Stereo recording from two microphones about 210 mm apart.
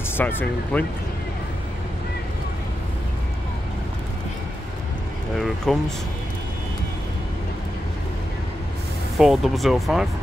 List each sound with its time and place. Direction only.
0.2 s speech: 10° left (ahead or behind)
5.7 s speech: centre (ahead or behind)
9.2 s speech: centre (ahead or behind)